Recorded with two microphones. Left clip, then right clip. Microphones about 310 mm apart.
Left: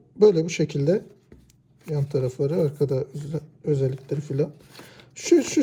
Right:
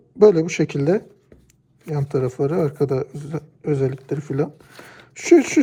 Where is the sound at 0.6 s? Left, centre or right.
Right.